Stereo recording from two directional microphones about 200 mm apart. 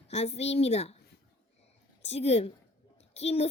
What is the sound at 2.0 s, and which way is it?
A woman's voice, 30° left (ahead or behind).